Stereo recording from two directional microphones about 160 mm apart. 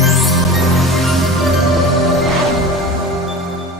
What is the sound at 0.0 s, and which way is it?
Music, centre (ahead or behind).